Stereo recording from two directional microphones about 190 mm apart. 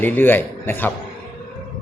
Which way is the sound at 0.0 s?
10° left (ahead or behind).